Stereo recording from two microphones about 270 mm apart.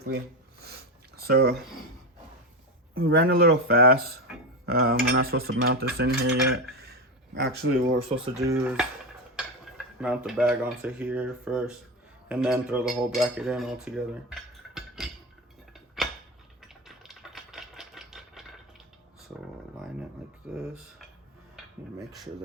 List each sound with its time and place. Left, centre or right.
0.6 s a sound: right
2.9 s speech: right
3.2 s cutlery: right
7.3 s cutlery: right
8.3 s cutlery: centre
9.3 s speech: centre
12.3 s cutlery: centre
14.8 s a sound: centre
16.8 s typewriter: centre
20.4 s cutlery: centre
21.5 s a sound: centre